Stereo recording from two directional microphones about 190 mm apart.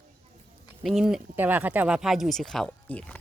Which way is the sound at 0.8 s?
Centre (ahead or behind).